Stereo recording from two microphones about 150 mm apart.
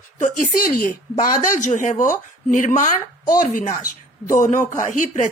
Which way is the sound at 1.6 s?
55° left (ahead or behind).